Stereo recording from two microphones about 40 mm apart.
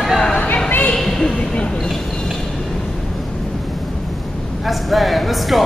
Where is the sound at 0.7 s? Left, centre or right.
Left.